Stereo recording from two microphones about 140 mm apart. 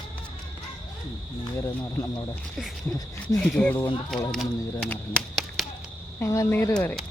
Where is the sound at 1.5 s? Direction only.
25° left (ahead or behind).